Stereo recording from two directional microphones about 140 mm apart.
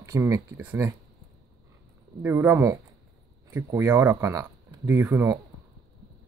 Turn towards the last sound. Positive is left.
turn(degrees=-20)  # may be behind; listen again after turning